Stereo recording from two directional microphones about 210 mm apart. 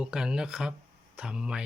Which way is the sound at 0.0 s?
5° right (ahead or behind).